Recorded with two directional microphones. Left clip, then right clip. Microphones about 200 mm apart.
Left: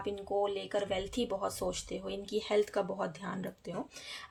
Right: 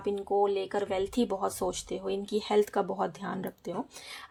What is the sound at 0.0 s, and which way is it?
Speech, 25° right (ahead or behind).